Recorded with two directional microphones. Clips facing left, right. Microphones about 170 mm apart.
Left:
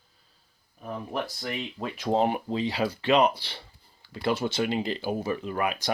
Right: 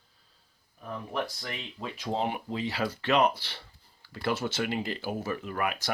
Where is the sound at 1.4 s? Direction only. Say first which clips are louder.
Left 5 dB; 50° left (ahead or behind).